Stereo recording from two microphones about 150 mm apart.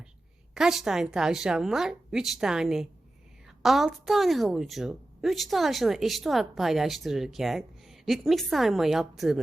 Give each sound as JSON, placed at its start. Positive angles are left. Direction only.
{"t": 0.5, "sound": "a woman's voice", "side_deg": 0}